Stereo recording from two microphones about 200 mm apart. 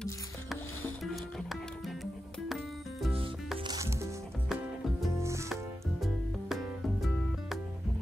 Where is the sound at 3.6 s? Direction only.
20° right (ahead or behind).